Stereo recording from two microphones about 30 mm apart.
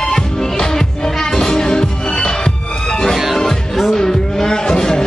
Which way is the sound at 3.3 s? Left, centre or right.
Centre.